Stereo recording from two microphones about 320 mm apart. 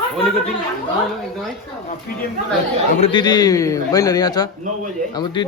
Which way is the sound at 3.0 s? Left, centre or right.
Centre.